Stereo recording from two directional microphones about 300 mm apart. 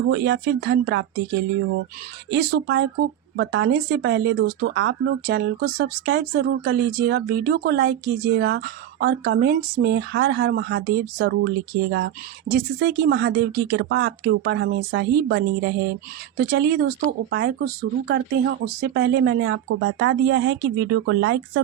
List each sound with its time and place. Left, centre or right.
0.1 s speech: right
18.1 s speech: right